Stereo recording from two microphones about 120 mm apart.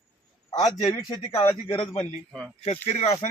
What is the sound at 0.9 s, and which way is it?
Speech, 35° left (ahead or behind).